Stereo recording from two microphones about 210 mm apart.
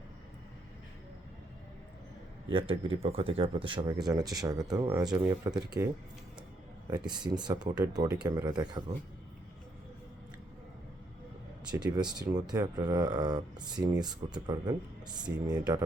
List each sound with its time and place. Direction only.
2.5 s speech: 25° right (ahead or behind)
7.1 s speech: 20° right (ahead or behind)
11.9 s speech: 20° right (ahead or behind)